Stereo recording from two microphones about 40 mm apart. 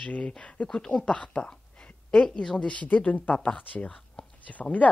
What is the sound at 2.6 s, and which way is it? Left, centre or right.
Speech, left.